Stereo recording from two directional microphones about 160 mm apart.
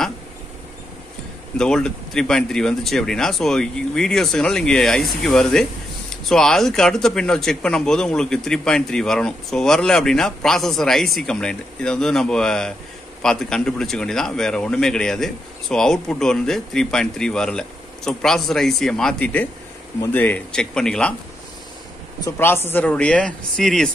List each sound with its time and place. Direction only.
1.6 s speech: 5° left (ahead or behind)
22.2 s speech: 15° left (ahead or behind)